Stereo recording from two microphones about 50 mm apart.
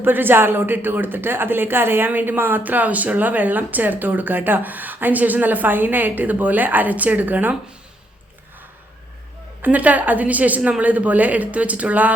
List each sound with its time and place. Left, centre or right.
0.0 s speech: right
2.0 s speech: right
9.6 s speech: right